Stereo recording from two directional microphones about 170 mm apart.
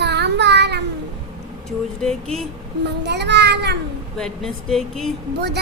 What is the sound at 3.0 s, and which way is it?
Child singing, 85° right.